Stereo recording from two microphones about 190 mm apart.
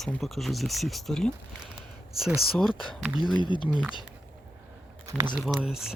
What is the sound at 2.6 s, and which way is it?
Speech, centre (ahead or behind).